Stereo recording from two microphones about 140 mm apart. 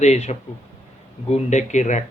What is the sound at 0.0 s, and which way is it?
Speech, 50° left (ahead or behind).